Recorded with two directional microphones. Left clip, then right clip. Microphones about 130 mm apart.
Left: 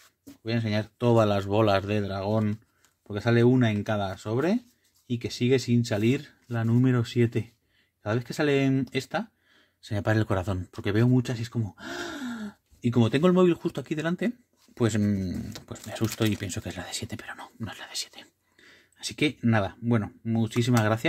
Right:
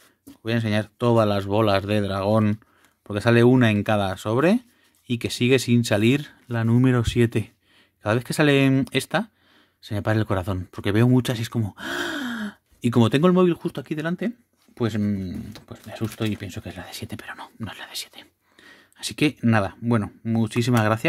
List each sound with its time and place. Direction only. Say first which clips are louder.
0.4 s speech: right 5 dB; 45° right (ahead or behind); by 1.9 s 25° right (ahead or behind)
1.9 s speech: right 6 dB; 50° right (ahead or behind)
6.5 s speech: right 5 dB; 45° right (ahead or behind)
9.8 s speech: right 2 dB; 25° right (ahead or behind)
10.8 s speech: right 5 dB; 40° right (ahead or behind)
11.1 s speech: right 5 dB; 70° right (ahead or behind); by 13.2 s 50° right (ahead or behind)
13.2 s speech: right 3 dB; 20° right (ahead or behind)
18.6 s a sound: right 5 dB; 35° right (ahead or behind)
19.5 s speech: right 4 dB; 30° right (ahead or behind)